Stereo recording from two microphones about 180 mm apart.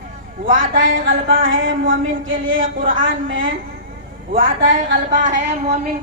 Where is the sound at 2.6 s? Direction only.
50° right (ahead or behind).